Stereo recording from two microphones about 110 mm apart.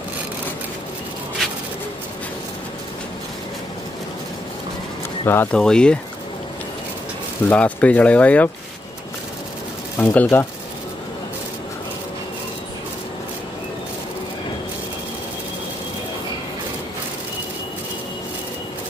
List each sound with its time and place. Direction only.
5.2 s speech: 20° left (ahead or behind)
5.5 s speech: 5° left (ahead or behind)
7.4 s speech: 15° left (ahead or behind)
9.9 s speech: 15° left (ahead or behind)